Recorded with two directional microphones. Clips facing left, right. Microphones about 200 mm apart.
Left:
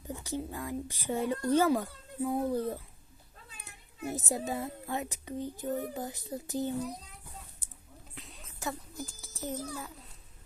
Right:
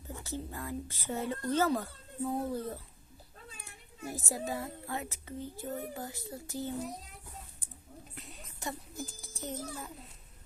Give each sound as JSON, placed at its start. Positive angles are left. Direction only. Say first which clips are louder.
{"t": 0.1, "sound": "speech", "louder": "left 4 dB", "side_deg": 15}
{"t": 8.1, "sound": "music", "louder": "right 1 dB", "side_deg": 0}